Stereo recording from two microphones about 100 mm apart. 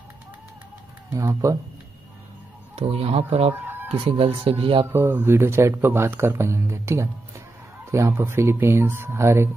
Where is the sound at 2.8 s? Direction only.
85° right.